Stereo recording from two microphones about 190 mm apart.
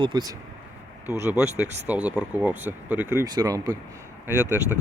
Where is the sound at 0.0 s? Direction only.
20° right (ahead or behind).